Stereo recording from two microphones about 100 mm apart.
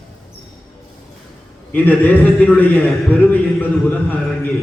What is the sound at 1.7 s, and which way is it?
A man's voice, 15° left (ahead or behind).